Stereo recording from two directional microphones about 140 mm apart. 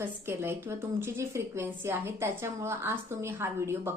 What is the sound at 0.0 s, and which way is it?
A woman's voice, 15° right (ahead or behind).